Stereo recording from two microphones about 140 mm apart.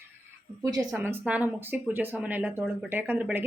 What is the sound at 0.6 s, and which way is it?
Speech, 25° right (ahead or behind).